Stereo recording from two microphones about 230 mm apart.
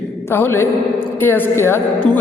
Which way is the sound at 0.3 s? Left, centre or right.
Centre.